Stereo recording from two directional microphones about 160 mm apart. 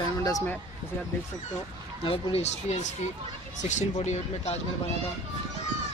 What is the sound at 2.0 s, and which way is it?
Speech, 40° left (ahead or behind).